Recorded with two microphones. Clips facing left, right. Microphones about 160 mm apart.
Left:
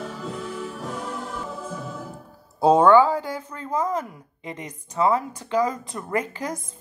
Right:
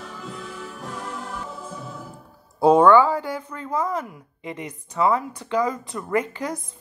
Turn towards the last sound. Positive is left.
turn(degrees=20)  # may be behind; listen again after turning